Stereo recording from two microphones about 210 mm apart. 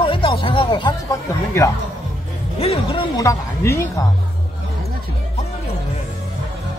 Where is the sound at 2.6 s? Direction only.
25° left (ahead or behind).